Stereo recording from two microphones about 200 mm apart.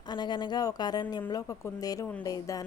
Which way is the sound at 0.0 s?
20° left (ahead or behind).